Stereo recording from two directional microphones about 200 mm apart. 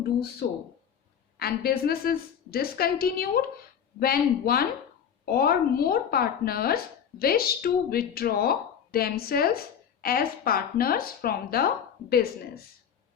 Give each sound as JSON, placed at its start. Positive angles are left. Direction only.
{"t": 0.0, "sound": "speech", "side_deg": 50}